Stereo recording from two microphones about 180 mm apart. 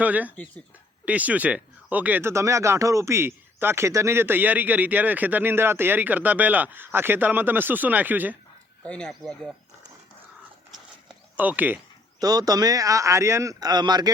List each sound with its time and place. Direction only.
0.0 s speech: 10° right (ahead or behind)
8.8 s speech: 5° left (ahead or behind)
11.3 s speech: 10° right (ahead or behind)
12.2 s speech: 20° right (ahead or behind)